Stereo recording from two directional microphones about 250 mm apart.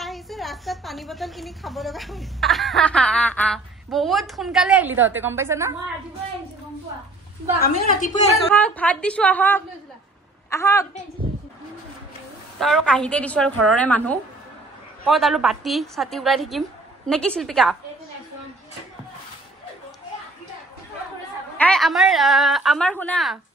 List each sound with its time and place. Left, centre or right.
0.0 s a woman's voice: centre
7.7 s a woman's voice: left
8.5 s a woman's voice: centre
12.5 s a woman's voice: centre
21.5 s a woman's voice: centre